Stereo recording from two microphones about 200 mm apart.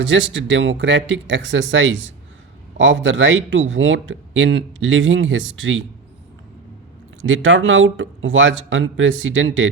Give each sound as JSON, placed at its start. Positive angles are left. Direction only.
{"t": 0.0, "sound": "speech", "side_deg": -70}
{"t": 7.2, "sound": "speech", "side_deg": -75}